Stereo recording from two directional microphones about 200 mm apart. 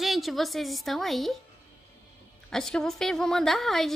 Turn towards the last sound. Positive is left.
turn(degrees=0)  # may be behind; listen again after turning